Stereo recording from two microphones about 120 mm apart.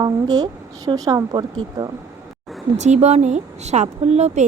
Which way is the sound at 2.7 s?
75° right (ahead or behind).